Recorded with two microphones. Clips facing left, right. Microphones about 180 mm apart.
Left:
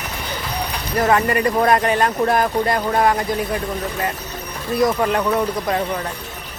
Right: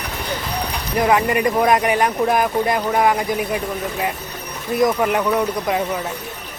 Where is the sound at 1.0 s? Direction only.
15° right (ahead or behind).